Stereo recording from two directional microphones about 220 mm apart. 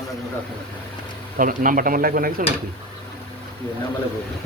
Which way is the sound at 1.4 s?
40° right (ahead or behind).